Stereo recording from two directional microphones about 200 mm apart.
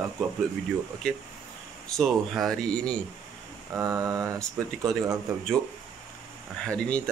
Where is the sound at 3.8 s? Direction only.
15° right (ahead or behind).